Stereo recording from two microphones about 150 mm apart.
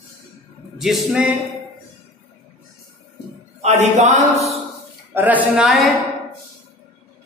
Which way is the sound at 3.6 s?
50° right (ahead or behind).